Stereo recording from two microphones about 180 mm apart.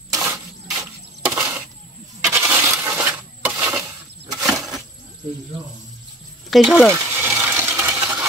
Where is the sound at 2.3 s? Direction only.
10° right (ahead or behind).